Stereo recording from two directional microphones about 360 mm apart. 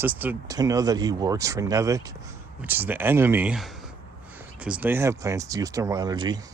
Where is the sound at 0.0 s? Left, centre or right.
Centre.